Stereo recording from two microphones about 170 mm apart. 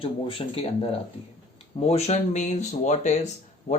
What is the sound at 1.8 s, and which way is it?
Speech, 40° left (ahead or behind).